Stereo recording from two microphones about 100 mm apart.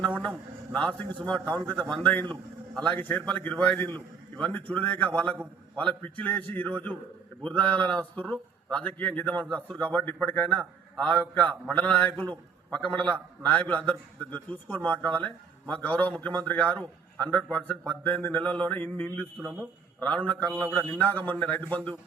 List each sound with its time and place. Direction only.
0.2 s a man's voice: 10° left (ahead or behind)